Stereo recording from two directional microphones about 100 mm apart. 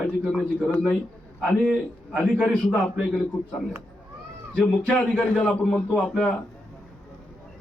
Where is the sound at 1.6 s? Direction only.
10° left (ahead or behind).